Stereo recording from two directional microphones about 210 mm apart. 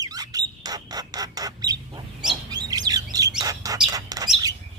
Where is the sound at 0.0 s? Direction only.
15° right (ahead or behind).